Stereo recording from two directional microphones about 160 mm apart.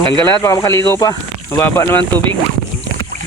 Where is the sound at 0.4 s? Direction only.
20° left (ahead or behind).